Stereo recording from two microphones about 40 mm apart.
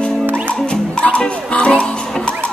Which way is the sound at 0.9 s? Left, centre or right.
Left.